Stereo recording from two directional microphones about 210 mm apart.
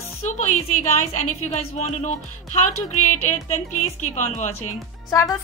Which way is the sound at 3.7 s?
90° left.